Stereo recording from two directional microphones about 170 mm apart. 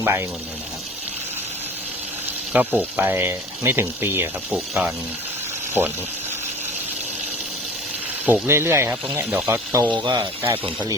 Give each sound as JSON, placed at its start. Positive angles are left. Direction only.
{"t": 0.0, "sound": "speech", "side_deg": -15}
{"t": 2.5, "sound": "speech", "side_deg": -10}
{"t": 8.3, "sound": "speech", "side_deg": -15}
{"t": 9.9, "sound": "speech", "side_deg": -25}